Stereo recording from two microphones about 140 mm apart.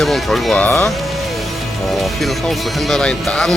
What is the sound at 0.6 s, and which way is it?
Speech, 20° left (ahead or behind).